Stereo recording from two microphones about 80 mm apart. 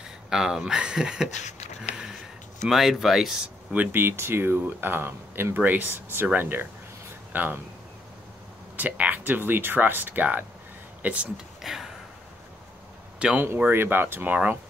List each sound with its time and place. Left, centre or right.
0.3 s speech: centre
2.6 s speech: centre
3.7 s speech: right
8.7 s speech: centre
11.6 s a sound: centre
13.2 s speech: centre
13.6 s speech: right